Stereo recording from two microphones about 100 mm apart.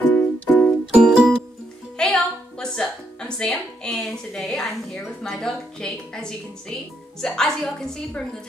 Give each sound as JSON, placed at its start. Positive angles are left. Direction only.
{"t": 0.1, "sound": "music", "side_deg": 15}
{"t": 0.9, "sound": "music", "side_deg": -5}
{"t": 2.0, "sound": "a woman's voice", "side_deg": 5}